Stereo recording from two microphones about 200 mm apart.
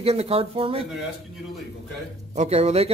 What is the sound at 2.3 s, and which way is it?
Speech, 30° right (ahead or behind).